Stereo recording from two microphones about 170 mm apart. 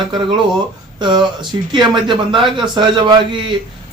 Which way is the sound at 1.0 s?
30° right (ahead or behind).